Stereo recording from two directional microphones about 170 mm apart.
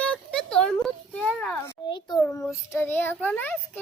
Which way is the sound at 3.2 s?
10° left (ahead or behind).